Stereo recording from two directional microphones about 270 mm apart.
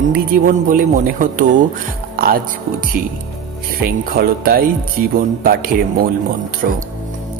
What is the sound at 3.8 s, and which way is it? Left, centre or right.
A woman's voice, right.